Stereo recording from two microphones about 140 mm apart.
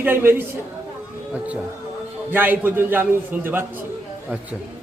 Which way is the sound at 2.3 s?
15° right (ahead or behind).